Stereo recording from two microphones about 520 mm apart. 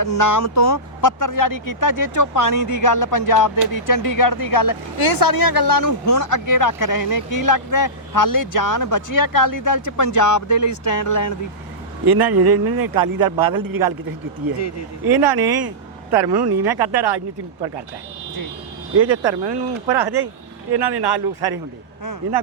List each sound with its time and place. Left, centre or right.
0.0 s speech: left
12.0 s a man's voice: right
15.0 s speech: right
18.9 s speech: right